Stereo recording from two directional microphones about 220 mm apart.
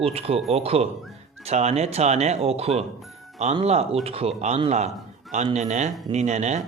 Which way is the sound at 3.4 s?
30° right (ahead or behind).